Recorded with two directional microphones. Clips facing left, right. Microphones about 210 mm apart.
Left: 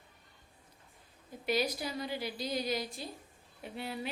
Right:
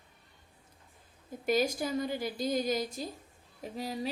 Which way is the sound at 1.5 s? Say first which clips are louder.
Right 4 dB; 45° right (ahead or behind).